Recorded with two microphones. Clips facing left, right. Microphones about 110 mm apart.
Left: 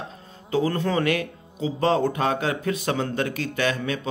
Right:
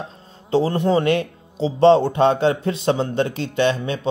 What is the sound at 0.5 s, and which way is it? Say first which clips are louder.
A man's voice: right 5 dB; 25° right (ahead or behind).